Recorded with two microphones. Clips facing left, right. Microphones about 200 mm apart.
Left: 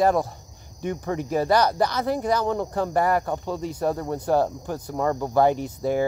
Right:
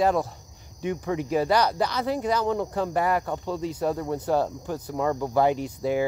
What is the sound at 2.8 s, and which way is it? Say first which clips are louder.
Speech: left 4 dB; 45° left (ahead or behind).